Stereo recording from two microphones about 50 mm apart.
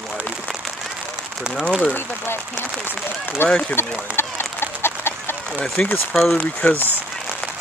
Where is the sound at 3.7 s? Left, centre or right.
Left.